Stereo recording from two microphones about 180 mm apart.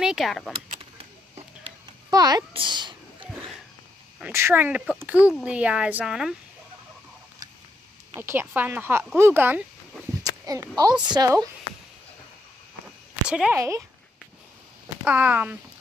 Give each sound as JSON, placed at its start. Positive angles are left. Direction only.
{"t": 0.0, "sound": "speech", "side_deg": 0}
{"t": 2.0, "sound": "a sound", "side_deg": -20}
{"t": 4.2, "sound": "speech", "side_deg": -15}
{"t": 8.2, "sound": "speech", "side_deg": -10}
{"t": 10.2, "sound": "a sound", "side_deg": -20}
{"t": 10.8, "sound": "a woman's voice", "side_deg": -25}
{"t": 13.3, "sound": "speech", "side_deg": -5}
{"t": 13.6, "sound": "speech", "side_deg": -15}
{"t": 15.0, "sound": "speech", "side_deg": -10}